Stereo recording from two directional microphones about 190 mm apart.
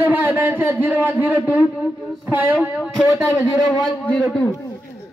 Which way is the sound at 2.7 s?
5° right (ahead or behind).